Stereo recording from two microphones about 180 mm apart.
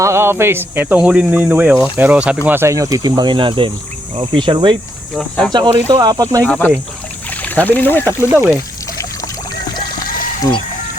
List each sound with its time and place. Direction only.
0.0 s speech: 15° right (ahead or behind)
4.1 s cricket: 30° right (ahead or behind)
5.1 s speech: centre (ahead or behind)
5.5 s cricket: 25° right (ahead or behind)
6.4 s speech: 10° left (ahead or behind)
8.3 s speech: 10° right (ahead or behind)